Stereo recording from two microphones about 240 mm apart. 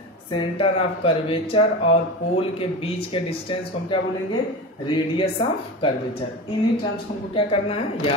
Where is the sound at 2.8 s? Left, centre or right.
Left.